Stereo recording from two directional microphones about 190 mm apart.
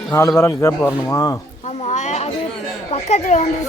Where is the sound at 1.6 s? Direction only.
35° left (ahead or behind).